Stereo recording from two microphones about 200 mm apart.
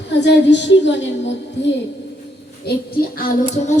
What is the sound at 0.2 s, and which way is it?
A woman's voice, 60° left (ahead or behind).